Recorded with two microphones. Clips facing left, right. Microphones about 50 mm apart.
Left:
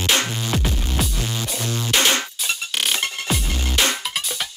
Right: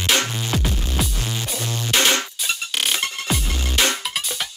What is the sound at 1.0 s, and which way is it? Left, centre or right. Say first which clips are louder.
Music: even; centre.